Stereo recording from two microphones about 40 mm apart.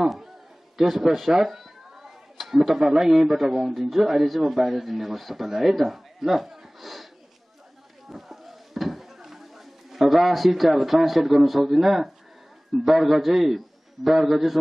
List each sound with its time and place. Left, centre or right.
0.7 s a man's voice: centre
8.1 s a sound: centre
12.7 s speech: centre